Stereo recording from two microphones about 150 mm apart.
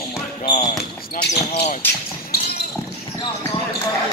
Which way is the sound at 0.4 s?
60° left (ahead or behind).